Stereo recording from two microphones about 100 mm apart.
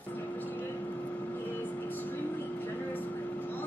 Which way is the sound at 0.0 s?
15° left (ahead or behind).